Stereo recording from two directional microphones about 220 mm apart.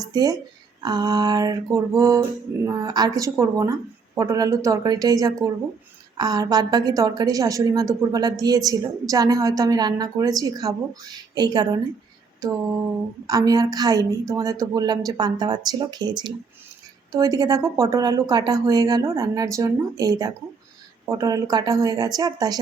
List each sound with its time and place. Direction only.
0.0 s a woman's voice: 15° right (ahead or behind)